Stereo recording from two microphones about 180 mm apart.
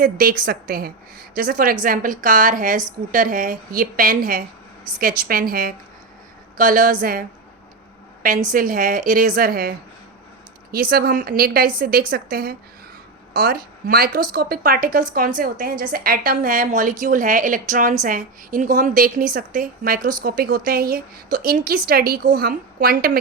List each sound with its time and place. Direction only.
0.0 s a woman's voice: 55° right (ahead or behind)